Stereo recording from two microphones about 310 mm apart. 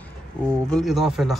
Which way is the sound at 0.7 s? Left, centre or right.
Centre.